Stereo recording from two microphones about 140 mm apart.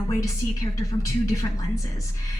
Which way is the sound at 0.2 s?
20° left (ahead or behind).